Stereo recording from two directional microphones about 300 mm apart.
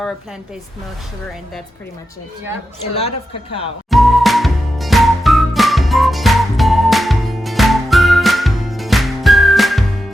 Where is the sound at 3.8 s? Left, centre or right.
Centre.